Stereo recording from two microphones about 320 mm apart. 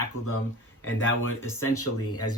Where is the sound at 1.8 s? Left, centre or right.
Left.